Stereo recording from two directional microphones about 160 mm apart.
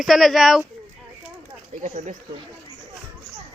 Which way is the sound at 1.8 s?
50° right (ahead or behind).